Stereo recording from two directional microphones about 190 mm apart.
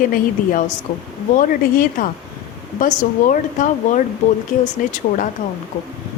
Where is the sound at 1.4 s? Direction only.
45° left (ahead or behind).